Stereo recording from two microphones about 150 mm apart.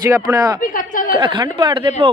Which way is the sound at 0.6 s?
65° left (ahead or behind).